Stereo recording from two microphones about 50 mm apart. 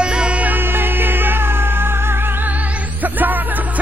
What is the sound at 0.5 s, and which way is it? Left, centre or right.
Music, right.